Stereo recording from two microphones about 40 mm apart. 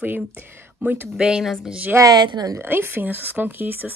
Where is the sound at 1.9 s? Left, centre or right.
Right.